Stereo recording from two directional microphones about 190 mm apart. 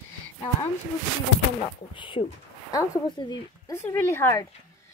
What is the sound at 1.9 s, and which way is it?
Speech, 25° left (ahead or behind).